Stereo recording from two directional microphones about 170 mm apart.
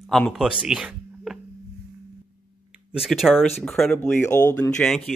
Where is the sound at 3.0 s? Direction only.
Centre (ahead or behind); by 4.7 s 15° left (ahead or behind).